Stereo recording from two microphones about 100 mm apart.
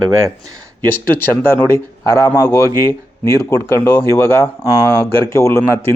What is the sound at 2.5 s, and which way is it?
Speech, 30° left (ahead or behind).